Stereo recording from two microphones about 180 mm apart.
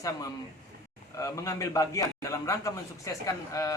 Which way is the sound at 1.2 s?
15° left (ahead or behind).